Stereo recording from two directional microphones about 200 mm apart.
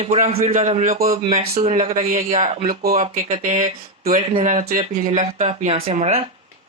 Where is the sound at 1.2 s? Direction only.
35° right (ahead or behind).